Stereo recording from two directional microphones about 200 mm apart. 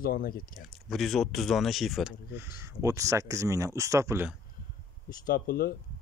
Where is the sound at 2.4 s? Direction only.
15° right (ahead or behind).